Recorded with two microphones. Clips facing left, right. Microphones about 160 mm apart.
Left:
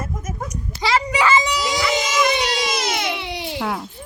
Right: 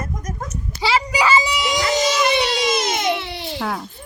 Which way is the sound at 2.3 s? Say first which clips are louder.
Right 2 dB; 25° right (ahead or behind).